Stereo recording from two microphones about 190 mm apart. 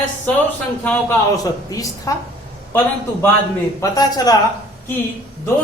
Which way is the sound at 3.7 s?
20° left (ahead or behind).